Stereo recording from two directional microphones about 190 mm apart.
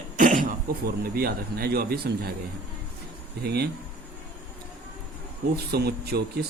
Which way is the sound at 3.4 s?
60° right (ahead or behind).